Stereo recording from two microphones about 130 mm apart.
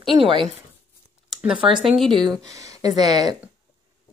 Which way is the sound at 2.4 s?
25° right (ahead or behind).